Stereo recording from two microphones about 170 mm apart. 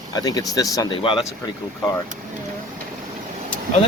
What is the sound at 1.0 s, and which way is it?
Speech, 30° left (ahead or behind).